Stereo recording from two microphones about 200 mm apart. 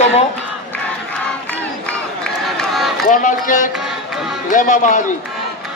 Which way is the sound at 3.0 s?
40° left (ahead or behind).